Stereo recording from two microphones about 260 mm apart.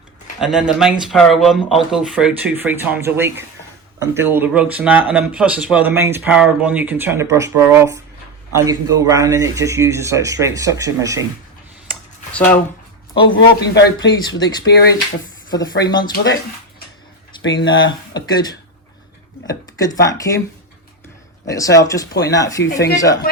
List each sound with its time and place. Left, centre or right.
0.3 s speech: centre
11.9 s a sound: centre
13.1 s speech: centre
13.6 s speech: left
15.4 s speech: centre
16.1 s speech: left
17.4 s speech: left
18.1 s speech: centre
21.4 s speech: centre